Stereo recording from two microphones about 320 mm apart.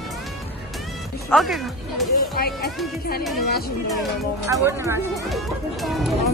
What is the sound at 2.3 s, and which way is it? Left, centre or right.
Speech, left.